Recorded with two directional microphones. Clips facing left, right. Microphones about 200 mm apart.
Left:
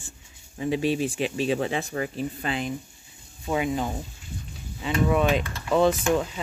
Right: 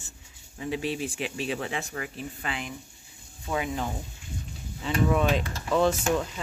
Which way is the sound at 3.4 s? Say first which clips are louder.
Left 4 dB; 15° left (ahead or behind).